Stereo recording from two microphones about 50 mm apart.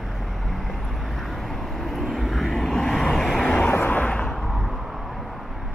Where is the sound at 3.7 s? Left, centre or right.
Left.